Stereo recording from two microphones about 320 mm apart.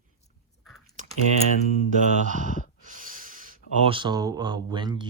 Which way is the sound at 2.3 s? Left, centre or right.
Right.